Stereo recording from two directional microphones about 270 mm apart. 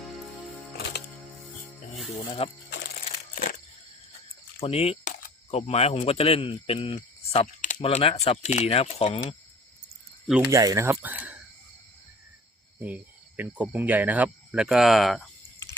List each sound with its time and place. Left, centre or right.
0.8 s music: left
2.4 s speech: left
4.6 s speech: left
10.2 s speech: centre
12.8 s speech: centre